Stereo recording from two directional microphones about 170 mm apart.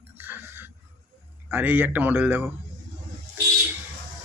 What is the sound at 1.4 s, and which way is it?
Speech, 10° right (ahead or behind).